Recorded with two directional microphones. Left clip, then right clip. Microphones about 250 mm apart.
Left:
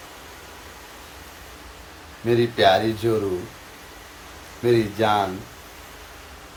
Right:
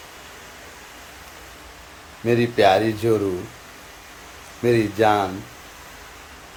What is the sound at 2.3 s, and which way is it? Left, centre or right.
Speech, right.